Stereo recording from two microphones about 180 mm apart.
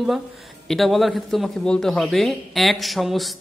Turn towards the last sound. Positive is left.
turn(degrees=0)  # may be behind; listen again after turning